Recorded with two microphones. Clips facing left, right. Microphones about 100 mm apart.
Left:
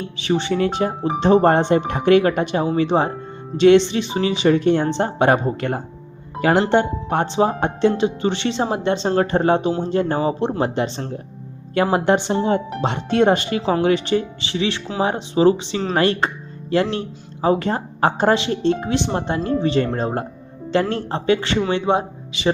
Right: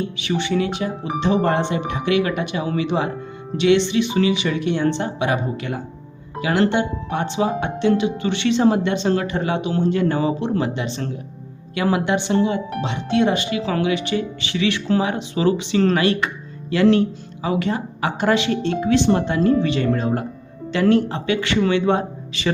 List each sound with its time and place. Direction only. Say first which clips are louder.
0.2 s speech: left 4 dB; 35° left (ahead or behind)
17.4 s speech: left 3 dB; 35° left (ahead or behind)
21.8 s speech: even; 20° left (ahead or behind)